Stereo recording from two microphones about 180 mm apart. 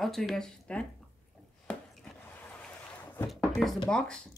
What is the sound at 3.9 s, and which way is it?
Speech, 5° left (ahead or behind).